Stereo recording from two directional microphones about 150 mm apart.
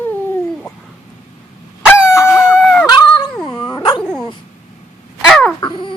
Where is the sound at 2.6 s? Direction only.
5° left (ahead or behind).